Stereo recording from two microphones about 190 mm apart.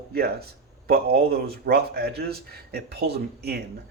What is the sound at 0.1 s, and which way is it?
Speech, 55° right (ahead or behind).